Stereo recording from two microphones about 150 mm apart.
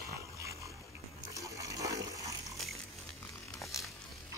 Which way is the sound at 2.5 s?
Centre (ahead or behind).